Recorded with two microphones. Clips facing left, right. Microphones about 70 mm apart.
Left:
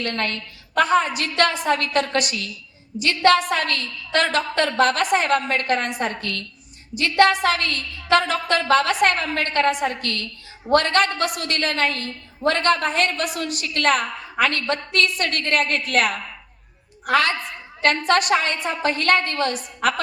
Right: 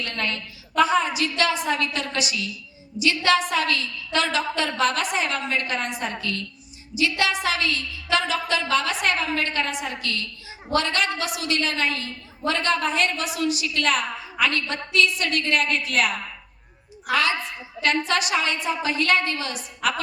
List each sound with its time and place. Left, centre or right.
0.0 s a woman's voice: left